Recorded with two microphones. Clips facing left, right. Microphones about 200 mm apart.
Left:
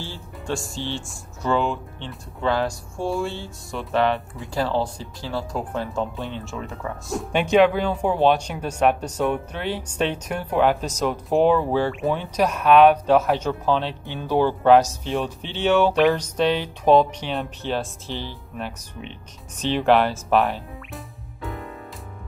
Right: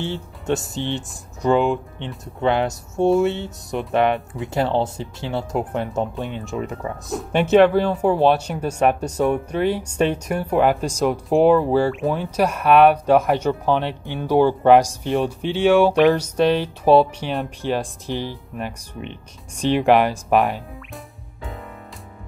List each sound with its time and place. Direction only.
0.0 s speech: 20° right (ahead or behind)
7.1 s speech: centre (ahead or behind)
20.9 s music: centre (ahead or behind)